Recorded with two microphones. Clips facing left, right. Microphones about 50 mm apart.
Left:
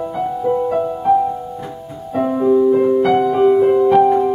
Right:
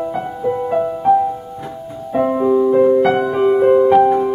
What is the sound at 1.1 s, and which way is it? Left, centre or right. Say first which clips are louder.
Music: right 1 dB; centre.